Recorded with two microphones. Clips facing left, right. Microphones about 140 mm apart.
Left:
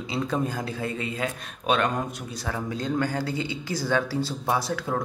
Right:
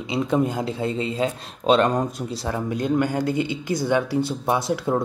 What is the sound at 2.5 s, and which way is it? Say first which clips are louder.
Speech: right 5 dB; 20° right (ahead or behind).